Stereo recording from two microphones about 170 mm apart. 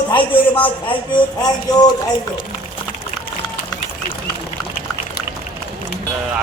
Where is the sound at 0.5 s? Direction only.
30° left (ahead or behind).